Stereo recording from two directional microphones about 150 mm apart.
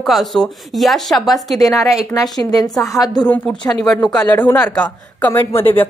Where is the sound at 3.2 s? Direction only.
10° left (ahead or behind).